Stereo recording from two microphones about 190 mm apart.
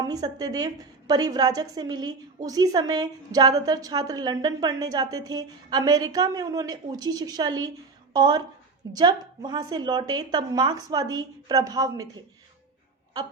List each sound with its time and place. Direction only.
0.0 s a woman's voice: 20° right (ahead or behind)